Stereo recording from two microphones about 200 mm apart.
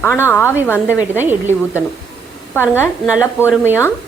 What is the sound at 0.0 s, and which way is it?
Speech, 10° left (ahead or behind).